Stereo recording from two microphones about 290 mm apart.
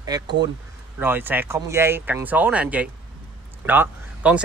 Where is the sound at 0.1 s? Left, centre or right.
Centre.